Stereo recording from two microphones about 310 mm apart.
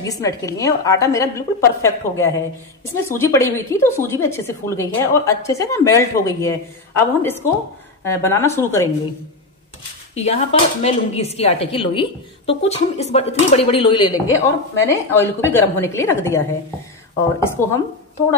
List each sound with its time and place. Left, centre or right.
0.0 s a woman's voice: centre
10.1 s a woman's voice: left
17.4 s a woman's voice: centre